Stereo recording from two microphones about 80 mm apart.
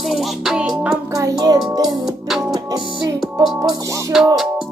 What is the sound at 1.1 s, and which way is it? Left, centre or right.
Music, right.